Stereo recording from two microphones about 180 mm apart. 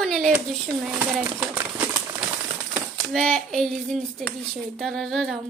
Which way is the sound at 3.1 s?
5° left (ahead or behind).